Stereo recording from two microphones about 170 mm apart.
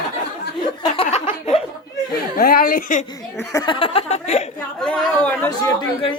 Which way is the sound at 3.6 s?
30° left (ahead or behind).